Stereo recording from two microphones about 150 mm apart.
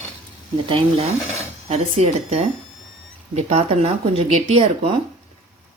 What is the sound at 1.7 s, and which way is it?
Speech, 45° right (ahead or behind).